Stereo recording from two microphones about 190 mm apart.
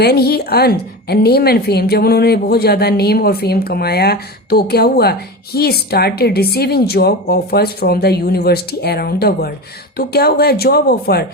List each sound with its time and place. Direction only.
0.0 s a woman's voice: 55° left (ahead or behind)